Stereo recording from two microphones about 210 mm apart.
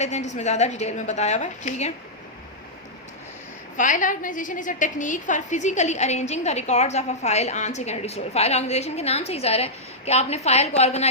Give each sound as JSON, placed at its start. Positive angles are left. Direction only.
{"t": 0.0, "sound": "a woman's voice", "side_deg": 35}
{"t": 3.8, "sound": "a woman's voice", "side_deg": 40}